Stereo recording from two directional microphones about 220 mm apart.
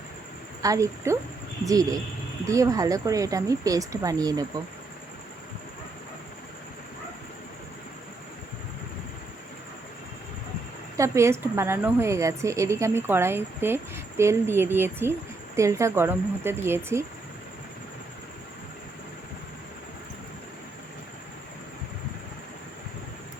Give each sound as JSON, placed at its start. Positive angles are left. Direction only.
{"t": 0.6, "sound": "a woman's voice", "side_deg": -15}
{"t": 10.9, "sound": "a woman's voice", "side_deg": -15}